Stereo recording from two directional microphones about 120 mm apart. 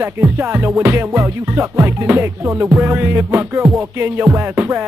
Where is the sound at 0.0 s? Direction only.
20° right (ahead or behind).